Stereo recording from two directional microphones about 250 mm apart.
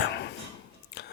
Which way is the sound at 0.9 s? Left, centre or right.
Left.